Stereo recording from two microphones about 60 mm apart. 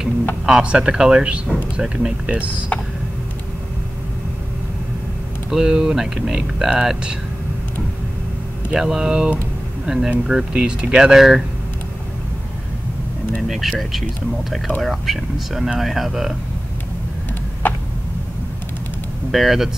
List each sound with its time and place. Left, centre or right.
0.5 s speech: centre
5.5 s speech: centre
8.7 s speech: centre
13.4 s speech: centre
17.6 s a sound: left
19.3 s speech: centre